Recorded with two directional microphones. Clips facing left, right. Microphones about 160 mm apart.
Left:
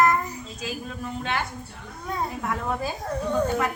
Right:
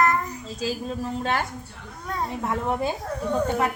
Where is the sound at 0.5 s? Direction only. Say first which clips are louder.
Right 7 dB; 30° right (ahead or behind).